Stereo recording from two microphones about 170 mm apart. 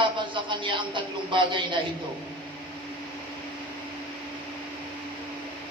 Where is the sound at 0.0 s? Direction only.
30° right (ahead or behind).